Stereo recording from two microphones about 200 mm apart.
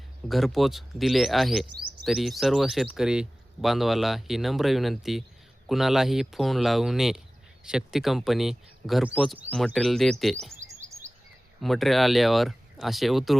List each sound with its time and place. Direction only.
0.3 s speech: centre (ahead or behind)
11.1 s a sound: 35° right (ahead or behind)
11.6 s speech: centre (ahead or behind)